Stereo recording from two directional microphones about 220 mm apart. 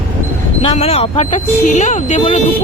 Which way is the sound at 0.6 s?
25° left (ahead or behind).